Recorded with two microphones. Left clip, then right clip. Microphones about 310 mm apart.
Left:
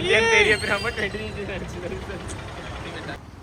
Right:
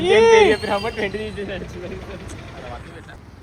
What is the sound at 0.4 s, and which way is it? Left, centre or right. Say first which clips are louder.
Speech: right 3 dB; right.